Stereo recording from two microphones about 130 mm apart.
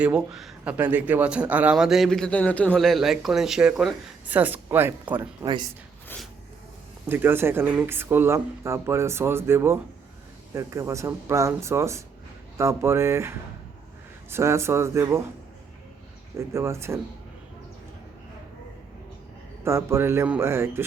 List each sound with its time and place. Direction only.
0.0 s speech: 5° right (ahead or behind)
5.5 s speech: 35° right (ahead or behind)
7.1 s speech: 15° right (ahead or behind)
16.5 s speech: 20° right (ahead or behind)
19.6 s speech: 20° right (ahead or behind)